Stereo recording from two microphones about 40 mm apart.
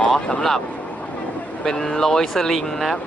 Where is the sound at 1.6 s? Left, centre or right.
Centre.